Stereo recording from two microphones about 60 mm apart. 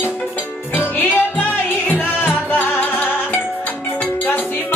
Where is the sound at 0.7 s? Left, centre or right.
Left.